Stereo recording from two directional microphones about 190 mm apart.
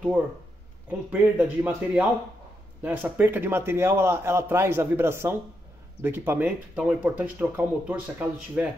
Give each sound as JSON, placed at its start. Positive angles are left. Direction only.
{"t": 0.8, "sound": "a man's voice", "side_deg": -10}